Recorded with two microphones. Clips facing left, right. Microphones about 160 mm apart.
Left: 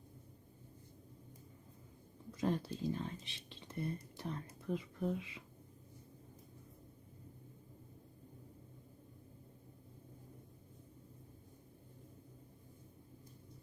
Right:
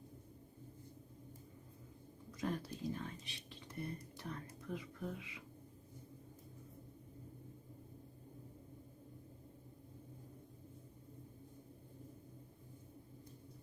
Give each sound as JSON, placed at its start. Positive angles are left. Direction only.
{"t": 2.4, "sound": "speech", "side_deg": 25}